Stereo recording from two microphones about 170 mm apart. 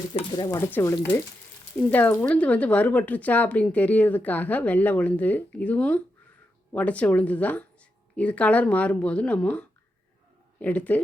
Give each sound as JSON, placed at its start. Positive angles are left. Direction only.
{"t": 0.1, "sound": "speech", "side_deg": 30}